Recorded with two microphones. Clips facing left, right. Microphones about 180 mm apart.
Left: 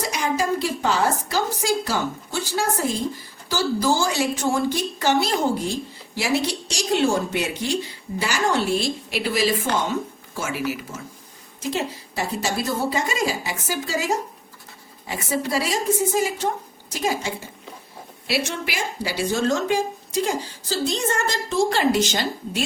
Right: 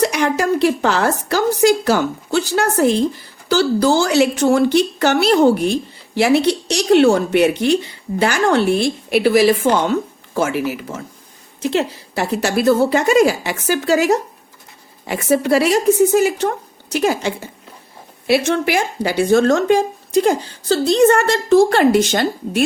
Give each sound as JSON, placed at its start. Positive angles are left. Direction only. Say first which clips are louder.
{"t": 0.0, "sound": "a woman's voice", "louder": "right 7 dB", "side_deg": -70}
{"t": 18.3, "sound": "speech", "louder": "right 10 dB", "side_deg": -55}